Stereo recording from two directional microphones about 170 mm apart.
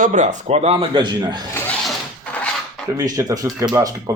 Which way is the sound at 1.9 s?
5° left (ahead or behind).